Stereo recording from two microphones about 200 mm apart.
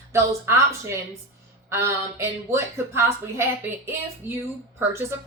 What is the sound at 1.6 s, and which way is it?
A woman's voice, 15° right (ahead or behind).